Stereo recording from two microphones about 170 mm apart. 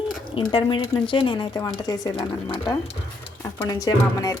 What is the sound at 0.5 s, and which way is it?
Speech, 30° left (ahead or behind).